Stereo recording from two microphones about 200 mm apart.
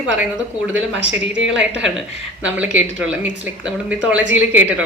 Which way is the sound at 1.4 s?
5° right (ahead or behind).